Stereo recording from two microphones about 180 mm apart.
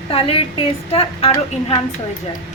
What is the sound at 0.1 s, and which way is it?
A woman's voice, 30° left (ahead or behind).